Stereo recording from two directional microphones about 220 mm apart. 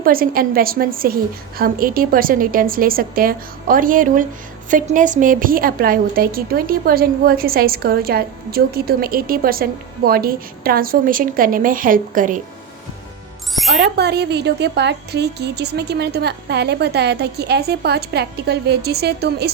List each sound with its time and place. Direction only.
0.0 s a woman's voice: 40° right (ahead or behind)
13.7 s a woman's voice: 50° right (ahead or behind)